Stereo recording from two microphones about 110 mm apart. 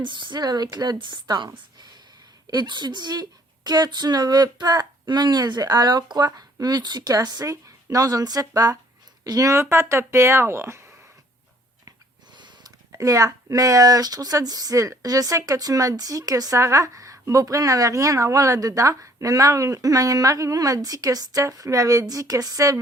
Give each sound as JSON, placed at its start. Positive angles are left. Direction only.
{"t": 0.0, "sound": "speech", "side_deg": -45}
{"t": 2.5, "sound": "speech", "side_deg": -40}
{"t": 11.9, "sound": "a sound", "side_deg": -45}
{"t": 12.9, "sound": "speech", "side_deg": -30}